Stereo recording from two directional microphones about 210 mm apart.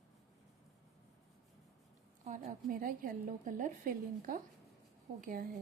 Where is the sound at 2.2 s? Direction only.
35° right (ahead or behind).